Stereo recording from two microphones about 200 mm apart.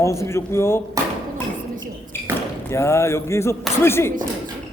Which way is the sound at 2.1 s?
10° left (ahead or behind).